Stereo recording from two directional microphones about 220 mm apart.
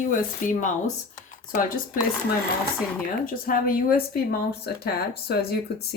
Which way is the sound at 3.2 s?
40° left (ahead or behind).